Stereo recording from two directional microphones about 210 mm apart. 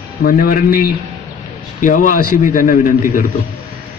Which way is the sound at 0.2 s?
45° left (ahead or behind).